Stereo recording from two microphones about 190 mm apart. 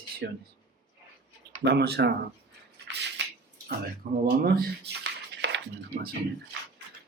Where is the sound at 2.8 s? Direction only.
65° right (ahead or behind).